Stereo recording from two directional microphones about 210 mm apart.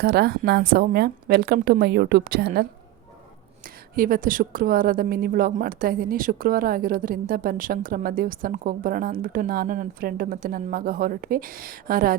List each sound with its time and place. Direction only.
0.0 s a woman's voice: 50° right (ahead or behind)